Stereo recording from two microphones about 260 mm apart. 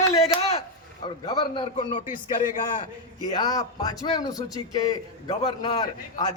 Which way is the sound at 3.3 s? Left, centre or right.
Centre.